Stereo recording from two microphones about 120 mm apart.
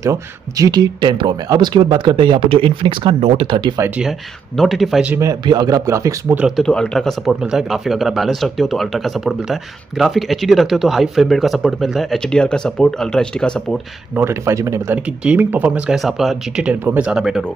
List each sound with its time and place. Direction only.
0.0 s speech: 30° right (ahead or behind)
4.6 s speech: centre (ahead or behind)
5.4 s speech: 35° right (ahead or behind)
6.5 s speech: 5° left (ahead or behind)
14.1 s speech: 20° right (ahead or behind)
15.2 s speech: 15° right (ahead or behind)
16.0 s speech: centre (ahead or behind)
16.6 s speech: 15° right (ahead or behind)